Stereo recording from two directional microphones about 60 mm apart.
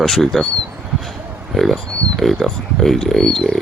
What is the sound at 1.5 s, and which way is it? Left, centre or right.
Speech, centre.